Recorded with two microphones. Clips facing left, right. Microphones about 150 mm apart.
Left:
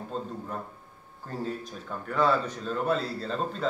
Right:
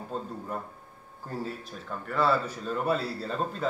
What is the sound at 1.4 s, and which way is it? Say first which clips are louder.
A man's voice: left 6 dB; centre (ahead or behind).